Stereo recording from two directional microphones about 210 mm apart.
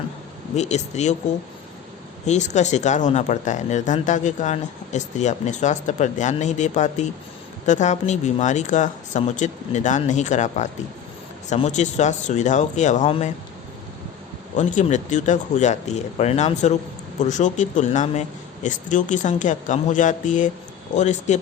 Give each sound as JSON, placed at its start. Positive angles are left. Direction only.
{"t": 0.5, "sound": "speech", "side_deg": 35}
{"t": 2.2, "sound": "speech", "side_deg": 35}
{"t": 14.5, "sound": "speech", "side_deg": 35}